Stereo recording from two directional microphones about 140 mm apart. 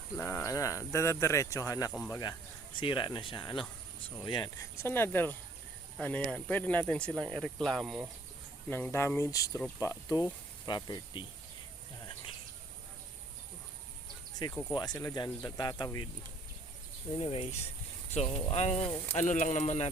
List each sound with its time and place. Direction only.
0.2 s speech: 20° left (ahead or behind)
2.8 s speech: 35° left (ahead or behind); by 8.0 s centre (ahead or behind)
8.7 s speech: 15° left (ahead or behind)
9.6 s speech: 10° left (ahead or behind)
9.8 s speech: 25° left (ahead or behind)
14.7 s speech: 30° left (ahead or behind)
17.2 s speech: 45° left (ahead or behind)
19.1 s speech: 65° left (ahead or behind)